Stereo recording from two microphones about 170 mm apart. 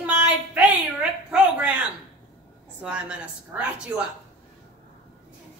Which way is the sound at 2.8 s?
5° right (ahead or behind).